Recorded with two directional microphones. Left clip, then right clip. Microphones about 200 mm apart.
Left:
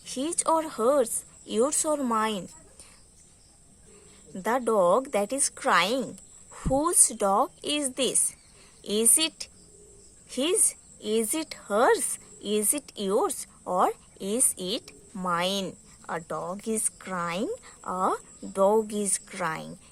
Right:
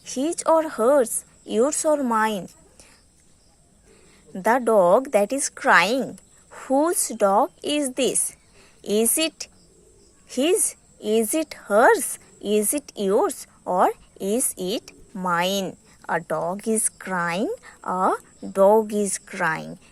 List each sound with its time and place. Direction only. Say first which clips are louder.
0.0 s a woman's voice: right 5 dB; 20° right (ahead or behind)
4.4 s a woman's voice: right 6 dB; 20° right (ahead or behind)